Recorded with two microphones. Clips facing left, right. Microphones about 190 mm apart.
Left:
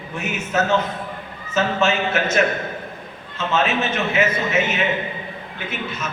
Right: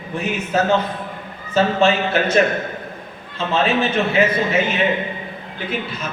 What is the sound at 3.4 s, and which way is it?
A man's voice, 35° right (ahead or behind).